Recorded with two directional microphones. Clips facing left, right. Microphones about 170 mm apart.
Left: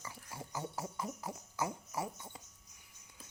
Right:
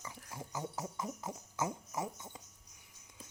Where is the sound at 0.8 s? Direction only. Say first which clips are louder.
Even; 20° right (ahead or behind).